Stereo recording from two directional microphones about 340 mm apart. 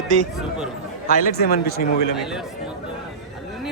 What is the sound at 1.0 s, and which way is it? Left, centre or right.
Speech, left.